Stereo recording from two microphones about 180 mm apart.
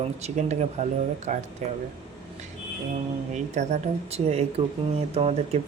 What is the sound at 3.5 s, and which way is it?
Speech, 35° right (ahead or behind).